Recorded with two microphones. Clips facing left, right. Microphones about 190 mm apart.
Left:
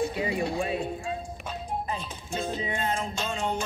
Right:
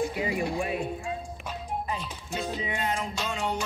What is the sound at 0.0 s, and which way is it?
Music, 25° left (ahead or behind).